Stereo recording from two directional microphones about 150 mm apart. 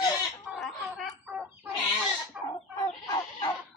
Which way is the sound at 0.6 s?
Centre (ahead or behind).